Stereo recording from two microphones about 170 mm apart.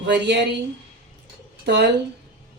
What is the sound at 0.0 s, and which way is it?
Speech, 90° right.